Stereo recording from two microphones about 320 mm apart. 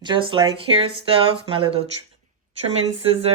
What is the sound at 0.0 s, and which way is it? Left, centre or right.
Speech, centre.